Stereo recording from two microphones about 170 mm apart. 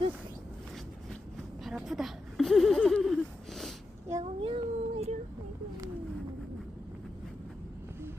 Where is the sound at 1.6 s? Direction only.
Centre (ahead or behind).